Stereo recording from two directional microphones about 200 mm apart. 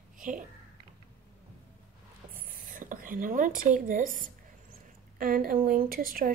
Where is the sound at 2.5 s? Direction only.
45° right (ahead or behind).